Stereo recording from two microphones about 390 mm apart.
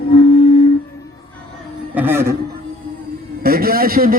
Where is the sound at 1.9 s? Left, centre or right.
Centre.